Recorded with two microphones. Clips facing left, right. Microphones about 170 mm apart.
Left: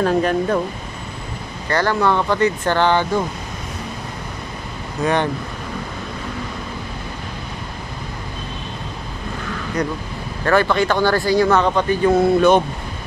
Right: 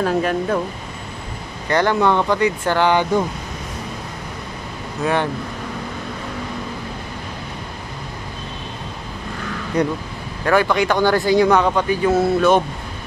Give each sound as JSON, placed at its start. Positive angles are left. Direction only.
{"t": 0.0, "sound": "speech", "side_deg": -5}
{"t": 1.7, "sound": "speech", "side_deg": -20}
{"t": 5.0, "sound": "speech", "side_deg": -5}
{"t": 9.8, "sound": "speech", "side_deg": -30}
{"t": 10.4, "sound": "speech", "side_deg": -10}